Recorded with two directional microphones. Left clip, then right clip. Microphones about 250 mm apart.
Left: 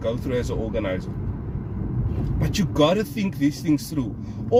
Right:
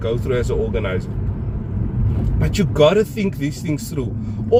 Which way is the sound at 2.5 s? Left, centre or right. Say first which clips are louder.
Right 6 dB; centre.